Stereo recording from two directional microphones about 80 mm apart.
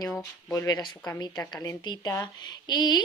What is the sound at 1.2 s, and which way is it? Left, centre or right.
Speech, left.